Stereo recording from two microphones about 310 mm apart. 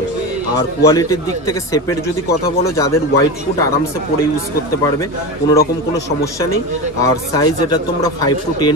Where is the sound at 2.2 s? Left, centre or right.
Left.